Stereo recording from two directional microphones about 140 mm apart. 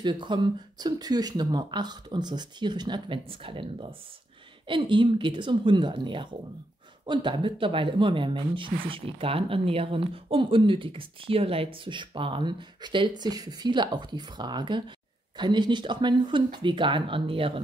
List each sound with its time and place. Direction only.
0.0 s speech: 35° right (ahead or behind)